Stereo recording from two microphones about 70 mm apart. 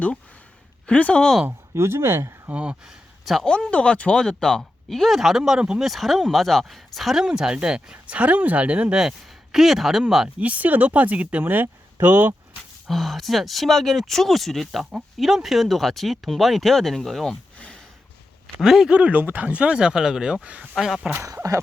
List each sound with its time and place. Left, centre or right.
0.9 s speech: centre
1.5 s speech: right
2.5 s speech: centre
3.4 s speech: centre
5.8 s speech: centre
10.4 s speech: right
12.9 s speech: centre
18.6 s speech: centre
20.7 s speech: centre
21.2 s speech: right